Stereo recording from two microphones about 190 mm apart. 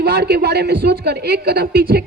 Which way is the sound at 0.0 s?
55° right (ahead or behind).